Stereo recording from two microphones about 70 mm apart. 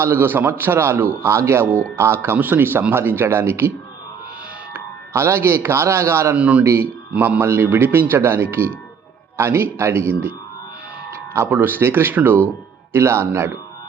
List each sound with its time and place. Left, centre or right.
0.0 s a man's voice: right
4.7 s speech: right
6.3 s speech: centre
7.2 s a man's voice: right
11.4 s a man's voice: right